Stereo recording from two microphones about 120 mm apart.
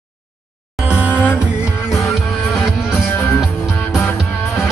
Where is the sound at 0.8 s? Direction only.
10° right (ahead or behind).